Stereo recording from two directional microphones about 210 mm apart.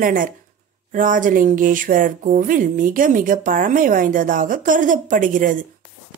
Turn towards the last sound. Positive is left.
turn(degrees=-40)  # may be behind; listen again after turning